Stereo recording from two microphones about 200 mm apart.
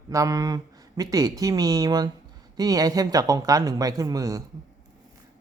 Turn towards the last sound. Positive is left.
turn(degrees=-15)  # may be behind; listen again after turning